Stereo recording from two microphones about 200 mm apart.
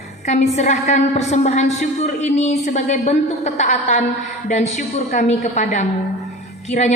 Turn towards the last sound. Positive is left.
turn(degrees=35)  # may be behind; listen again after turning